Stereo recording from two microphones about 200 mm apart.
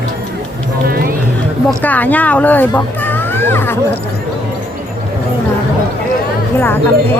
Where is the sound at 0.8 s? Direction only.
50° right (ahead or behind).